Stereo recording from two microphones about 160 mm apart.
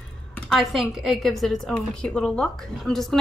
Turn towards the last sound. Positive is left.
turn(degrees=0)  # may be behind; listen again after turning